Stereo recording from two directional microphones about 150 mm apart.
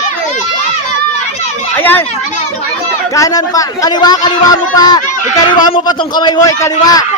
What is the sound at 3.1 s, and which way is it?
Speech, 25° left (ahead or behind).